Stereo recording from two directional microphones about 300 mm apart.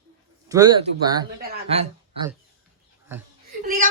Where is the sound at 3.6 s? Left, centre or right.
Right.